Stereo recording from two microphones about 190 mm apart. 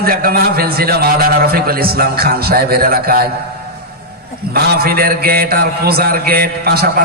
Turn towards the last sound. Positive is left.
turn(degrees=-55)  # may be behind; listen again after turning